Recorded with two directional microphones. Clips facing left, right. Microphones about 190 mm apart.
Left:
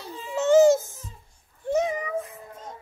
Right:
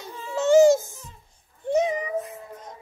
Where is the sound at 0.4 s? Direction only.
10° right (ahead or behind).